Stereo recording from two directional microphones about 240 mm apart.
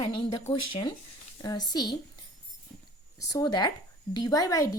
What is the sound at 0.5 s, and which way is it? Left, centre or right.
Speech, left.